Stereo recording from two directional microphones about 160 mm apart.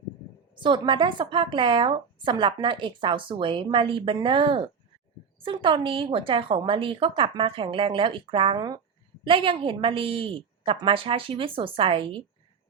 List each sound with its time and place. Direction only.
0.5 s speech: 30° right (ahead or behind)